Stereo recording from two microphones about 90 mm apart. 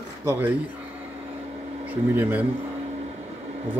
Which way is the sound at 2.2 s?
20° right (ahead or behind).